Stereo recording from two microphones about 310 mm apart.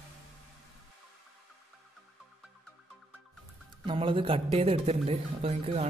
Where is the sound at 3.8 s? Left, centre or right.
Centre.